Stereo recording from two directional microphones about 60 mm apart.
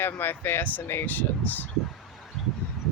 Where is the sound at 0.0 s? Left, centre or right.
Left.